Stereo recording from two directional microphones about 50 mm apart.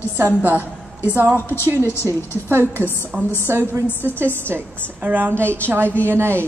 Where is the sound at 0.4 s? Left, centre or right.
Right.